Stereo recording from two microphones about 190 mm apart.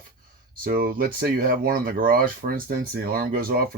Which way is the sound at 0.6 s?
50° right (ahead or behind).